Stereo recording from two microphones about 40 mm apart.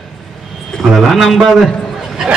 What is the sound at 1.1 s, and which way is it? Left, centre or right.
Speech, centre.